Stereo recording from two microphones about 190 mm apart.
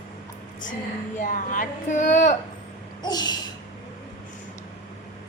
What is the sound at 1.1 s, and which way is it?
Speech, 45° left (ahead or behind).